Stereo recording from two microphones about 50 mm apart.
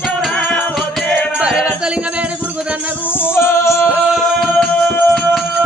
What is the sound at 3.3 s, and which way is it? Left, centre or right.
Music, left.